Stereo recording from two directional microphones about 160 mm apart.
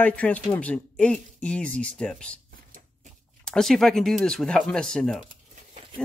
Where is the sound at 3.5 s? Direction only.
Centre (ahead or behind).